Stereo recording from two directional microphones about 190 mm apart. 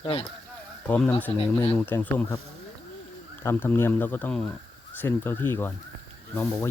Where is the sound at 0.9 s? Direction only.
10° left (ahead or behind).